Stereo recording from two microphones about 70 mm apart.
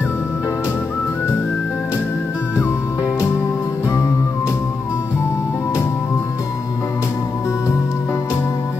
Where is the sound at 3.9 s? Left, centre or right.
Left.